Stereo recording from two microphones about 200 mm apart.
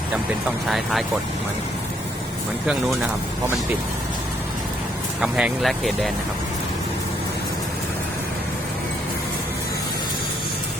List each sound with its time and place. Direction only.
0.7 s speech: centre (ahead or behind)
2.6 s speech: centre (ahead or behind)
5.2 s speech: centre (ahead or behind)